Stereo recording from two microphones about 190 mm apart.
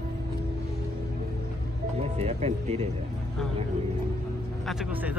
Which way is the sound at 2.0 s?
35° right (ahead or behind).